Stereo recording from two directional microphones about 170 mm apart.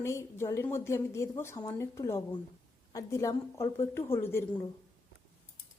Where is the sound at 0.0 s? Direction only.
15° left (ahead or behind).